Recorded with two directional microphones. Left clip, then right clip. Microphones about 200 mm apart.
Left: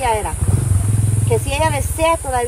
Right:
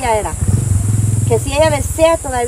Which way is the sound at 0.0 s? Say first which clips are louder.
Right 3 dB; centre (ahead or behind).